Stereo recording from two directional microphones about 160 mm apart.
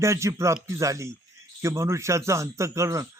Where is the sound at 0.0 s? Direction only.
20° right (ahead or behind).